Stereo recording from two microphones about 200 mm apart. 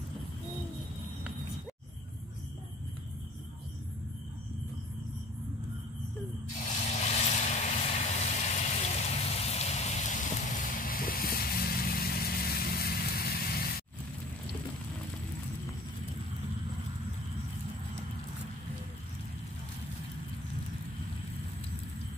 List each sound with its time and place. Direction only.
6.9 s vehicle: 35° left (ahead or behind); by 13.8 s 50° left (ahead or behind)